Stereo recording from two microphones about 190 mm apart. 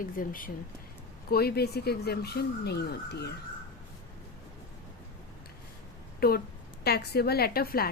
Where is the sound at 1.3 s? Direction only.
55° left (ahead or behind).